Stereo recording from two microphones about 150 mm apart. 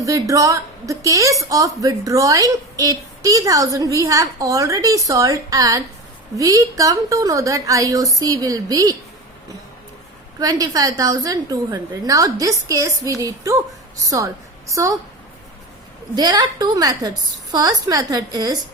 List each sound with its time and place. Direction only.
0.0 s a woman's voice: 20° right (ahead or behind)
10.4 s a woman's voice: 25° right (ahead or behind)
14.8 s a woman's voice: 20° right (ahead or behind)
16.1 s a woman's voice: 25° right (ahead or behind)